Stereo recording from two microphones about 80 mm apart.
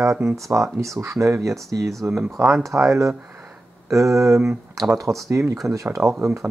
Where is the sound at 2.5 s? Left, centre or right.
Right.